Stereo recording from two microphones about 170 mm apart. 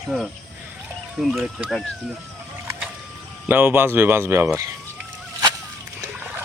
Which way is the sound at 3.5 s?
10° right (ahead or behind).